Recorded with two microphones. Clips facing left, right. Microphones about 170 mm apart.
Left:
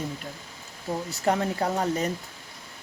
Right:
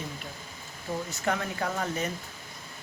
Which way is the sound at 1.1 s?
35° left (ahead or behind).